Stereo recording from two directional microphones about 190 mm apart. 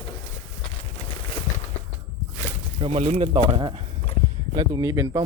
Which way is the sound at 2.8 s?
30° right (ahead or behind).